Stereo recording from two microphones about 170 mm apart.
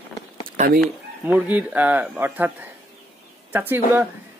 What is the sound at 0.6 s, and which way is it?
Speech, 40° right (ahead or behind).